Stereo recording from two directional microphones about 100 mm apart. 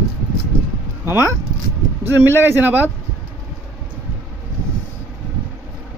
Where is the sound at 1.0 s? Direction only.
25° right (ahead or behind).